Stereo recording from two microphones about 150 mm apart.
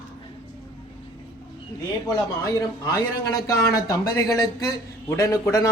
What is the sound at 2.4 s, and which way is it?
Speech, 25° left (ahead or behind).